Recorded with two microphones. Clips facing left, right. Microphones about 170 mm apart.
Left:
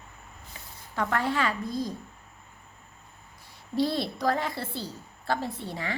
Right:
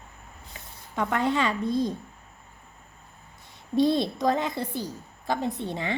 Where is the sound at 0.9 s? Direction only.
20° right (ahead or behind).